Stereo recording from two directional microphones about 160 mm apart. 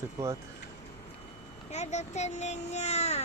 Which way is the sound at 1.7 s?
45° left (ahead or behind).